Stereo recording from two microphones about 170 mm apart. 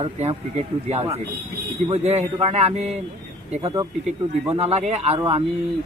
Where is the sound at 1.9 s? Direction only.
40° right (ahead or behind).